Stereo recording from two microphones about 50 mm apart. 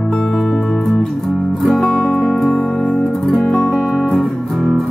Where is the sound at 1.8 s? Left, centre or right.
Left.